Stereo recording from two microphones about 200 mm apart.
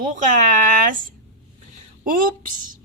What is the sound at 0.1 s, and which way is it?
A woman's voice, 40° right (ahead or behind).